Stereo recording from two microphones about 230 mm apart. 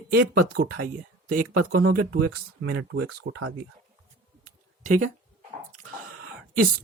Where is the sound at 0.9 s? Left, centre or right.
Right.